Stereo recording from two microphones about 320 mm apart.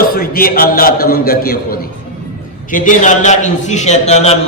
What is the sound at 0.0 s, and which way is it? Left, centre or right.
A man's voice, left.